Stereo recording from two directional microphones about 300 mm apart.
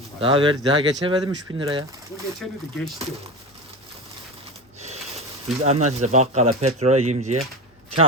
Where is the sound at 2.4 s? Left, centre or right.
Centre.